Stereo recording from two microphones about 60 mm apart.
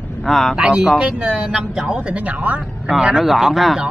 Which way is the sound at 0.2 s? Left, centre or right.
Centre.